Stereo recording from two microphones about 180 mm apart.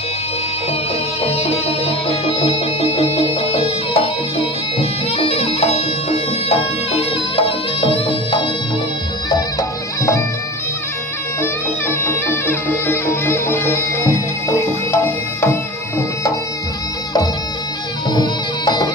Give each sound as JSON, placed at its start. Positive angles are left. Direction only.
{"t": 1.2, "sound": "music", "side_deg": 35}
{"t": 11.4, "sound": "music", "side_deg": 15}
{"t": 18.1, "sound": "music", "side_deg": 25}